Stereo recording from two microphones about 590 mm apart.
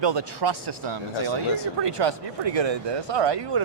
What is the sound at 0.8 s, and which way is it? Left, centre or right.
Speech, right.